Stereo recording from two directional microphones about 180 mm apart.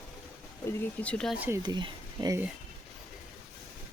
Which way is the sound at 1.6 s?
25° right (ahead or behind).